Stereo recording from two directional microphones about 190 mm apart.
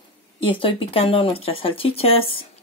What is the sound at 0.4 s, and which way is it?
Speech, 25° left (ahead or behind).